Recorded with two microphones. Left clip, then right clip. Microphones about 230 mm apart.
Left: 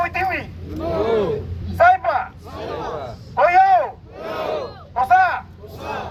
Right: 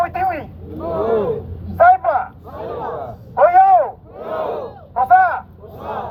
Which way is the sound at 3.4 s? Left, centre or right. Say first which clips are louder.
Right 3 dB; left.